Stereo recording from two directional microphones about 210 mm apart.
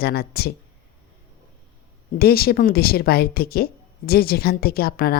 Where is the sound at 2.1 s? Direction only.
45° left (ahead or behind).